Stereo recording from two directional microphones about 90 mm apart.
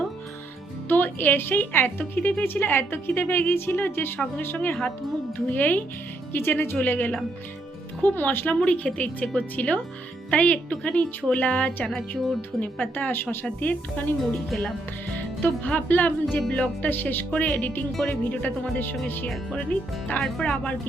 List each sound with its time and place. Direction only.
0.9 s a woman's voice: 20° left (ahead or behind)
11.9 s speech: centre (ahead or behind)
12.5 s a woman's voice: 20° left (ahead or behind)
14.2 s speech: centre (ahead or behind)
15.4 s a woman's voice: 20° left (ahead or behind)
20.2 s speech: 5° left (ahead or behind)